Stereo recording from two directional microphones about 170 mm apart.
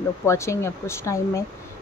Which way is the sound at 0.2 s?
15° left (ahead or behind).